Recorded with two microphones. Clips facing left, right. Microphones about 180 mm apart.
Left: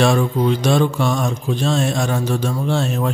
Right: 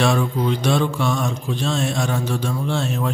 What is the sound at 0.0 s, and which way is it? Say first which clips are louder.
Speech: left 3 dB; 45° left (ahead or behind).